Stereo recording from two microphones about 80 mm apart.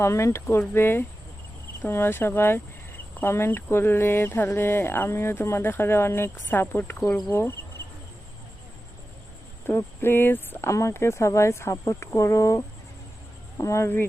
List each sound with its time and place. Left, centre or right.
0.0 s speech: left
9.6 s speech: left
10.7 s speech: left